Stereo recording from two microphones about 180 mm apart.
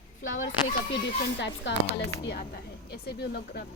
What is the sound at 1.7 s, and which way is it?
Speech, 85° left.